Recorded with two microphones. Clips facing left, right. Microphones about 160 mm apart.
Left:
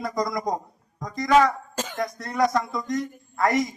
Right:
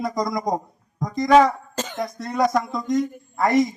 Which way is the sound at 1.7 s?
10° left (ahead or behind).